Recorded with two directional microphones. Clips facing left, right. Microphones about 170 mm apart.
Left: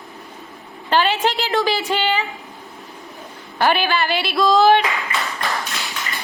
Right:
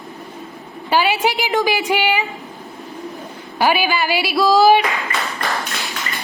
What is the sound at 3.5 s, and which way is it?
Speech, 10° right (ahead or behind).